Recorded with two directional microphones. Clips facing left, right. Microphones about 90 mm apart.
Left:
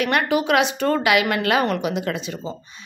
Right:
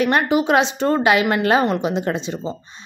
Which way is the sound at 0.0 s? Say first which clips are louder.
Right 3 dB; 25° right (ahead or behind).